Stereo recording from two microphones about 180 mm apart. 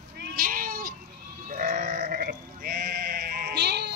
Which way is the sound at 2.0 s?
60° right (ahead or behind).